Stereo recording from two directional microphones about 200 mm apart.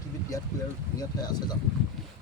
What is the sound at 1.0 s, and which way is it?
Speech, 20° left (ahead or behind).